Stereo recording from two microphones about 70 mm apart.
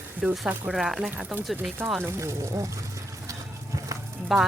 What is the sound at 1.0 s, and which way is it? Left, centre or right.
Speech, centre.